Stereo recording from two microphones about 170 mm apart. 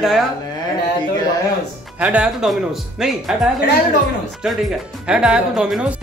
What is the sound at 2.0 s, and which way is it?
Speech, 5° right (ahead or behind).